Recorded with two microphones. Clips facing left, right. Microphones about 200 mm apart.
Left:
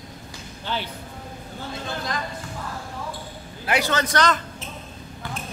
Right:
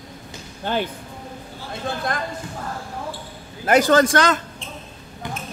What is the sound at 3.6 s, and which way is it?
Speech, 45° right (ahead or behind).